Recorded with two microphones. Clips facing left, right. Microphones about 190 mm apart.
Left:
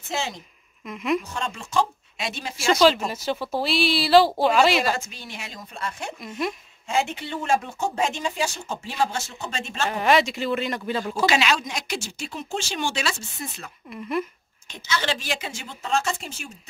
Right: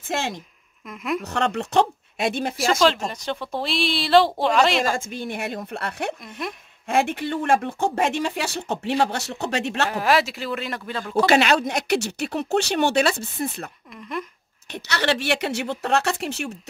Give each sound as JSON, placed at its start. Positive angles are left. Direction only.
{"t": 0.8, "sound": "speech", "side_deg": 0}
{"t": 1.2, "sound": "speech", "side_deg": -70}
{"t": 2.5, "sound": "speech", "side_deg": 0}
{"t": 4.8, "sound": "speech", "side_deg": -50}
{"t": 6.2, "sound": "speech", "side_deg": 0}
{"t": 6.9, "sound": "speech", "side_deg": -55}
{"t": 9.8, "sound": "speech", "side_deg": 0}
{"t": 11.2, "sound": "speech", "side_deg": -55}
{"t": 13.8, "sound": "speech", "side_deg": 5}
{"t": 14.7, "sound": "a woman's voice", "side_deg": -65}